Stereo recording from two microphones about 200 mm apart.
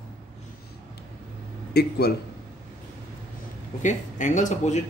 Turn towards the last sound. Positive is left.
turn(degrees=35)  # may be behind; listen again after turning